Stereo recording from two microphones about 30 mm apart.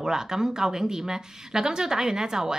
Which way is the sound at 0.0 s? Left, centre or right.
Centre.